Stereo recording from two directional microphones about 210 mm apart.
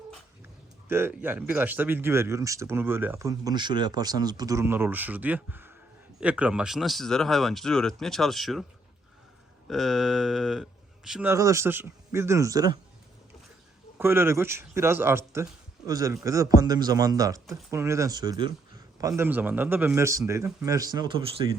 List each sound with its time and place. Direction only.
0.9 s speech: 10° right (ahead or behind)
9.6 s speech: centre (ahead or behind); by 12.8 s 15° right (ahead or behind)
14.0 s speech: 10° right (ahead or behind)